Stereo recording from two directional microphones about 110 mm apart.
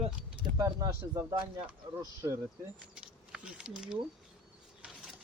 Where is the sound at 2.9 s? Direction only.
5° right (ahead or behind).